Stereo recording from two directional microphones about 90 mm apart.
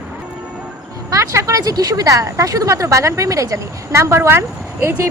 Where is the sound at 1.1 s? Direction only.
35° right (ahead or behind).